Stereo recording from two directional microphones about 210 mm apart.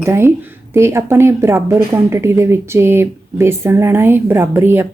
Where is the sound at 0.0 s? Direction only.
10° right (ahead or behind).